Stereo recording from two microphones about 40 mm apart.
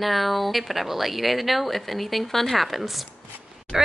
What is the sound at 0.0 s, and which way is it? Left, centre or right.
A woman's voice, centre.